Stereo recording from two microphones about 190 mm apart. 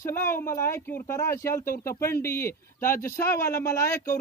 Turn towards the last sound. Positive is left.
turn(degrees=15)  # may be behind; listen again after turning